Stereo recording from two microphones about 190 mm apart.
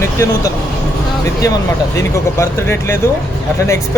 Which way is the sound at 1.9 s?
15° left (ahead or behind).